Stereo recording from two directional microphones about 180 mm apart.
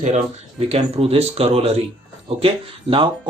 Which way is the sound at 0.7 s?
35° right (ahead or behind).